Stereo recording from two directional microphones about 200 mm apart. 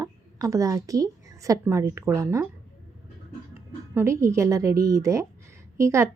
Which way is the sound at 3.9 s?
15° right (ahead or behind).